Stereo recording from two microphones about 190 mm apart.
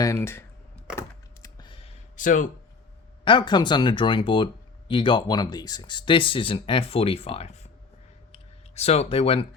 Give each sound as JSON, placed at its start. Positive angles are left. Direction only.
{"t": 0.0, "sound": "speech", "side_deg": 15}
{"t": 0.9, "sound": "computer keyboard", "side_deg": 20}
{"t": 2.1, "sound": "speech", "side_deg": 40}
{"t": 3.2, "sound": "speech", "side_deg": 25}
{"t": 8.3, "sound": "a sound", "side_deg": 35}